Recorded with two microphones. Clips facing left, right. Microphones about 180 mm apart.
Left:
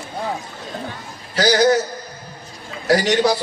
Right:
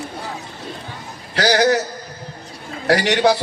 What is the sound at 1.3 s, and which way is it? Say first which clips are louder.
Speech: even; 65° right (ahead or behind).